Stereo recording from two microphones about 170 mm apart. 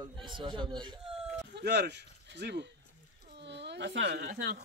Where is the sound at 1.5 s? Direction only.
80° right; by 4.6 s 65° right (ahead or behind).